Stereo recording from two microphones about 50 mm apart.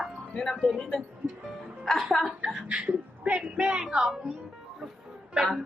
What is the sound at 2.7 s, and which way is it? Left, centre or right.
A woman's voice, right.